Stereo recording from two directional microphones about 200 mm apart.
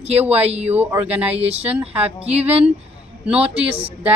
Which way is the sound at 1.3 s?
30° right (ahead or behind).